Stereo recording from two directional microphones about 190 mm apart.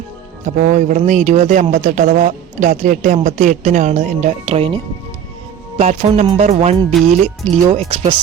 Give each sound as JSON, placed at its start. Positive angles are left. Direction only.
{"t": 0.4, "sound": "speech", "side_deg": -40}